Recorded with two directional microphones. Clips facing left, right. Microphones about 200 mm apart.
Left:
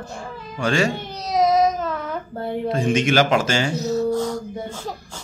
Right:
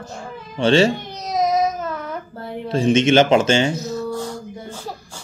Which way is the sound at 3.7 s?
35° left (ahead or behind).